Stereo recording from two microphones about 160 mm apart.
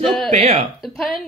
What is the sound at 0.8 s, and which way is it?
Speech, centre (ahead or behind).